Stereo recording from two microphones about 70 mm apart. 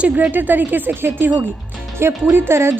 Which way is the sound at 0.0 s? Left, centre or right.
Centre.